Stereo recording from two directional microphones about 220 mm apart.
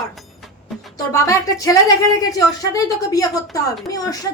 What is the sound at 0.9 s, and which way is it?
Speech, 15° left (ahead or behind).